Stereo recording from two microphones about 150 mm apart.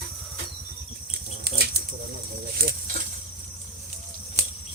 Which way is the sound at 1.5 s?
90° right.